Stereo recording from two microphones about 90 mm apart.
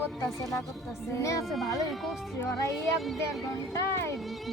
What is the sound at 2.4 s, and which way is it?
Speech, 35° left (ahead or behind).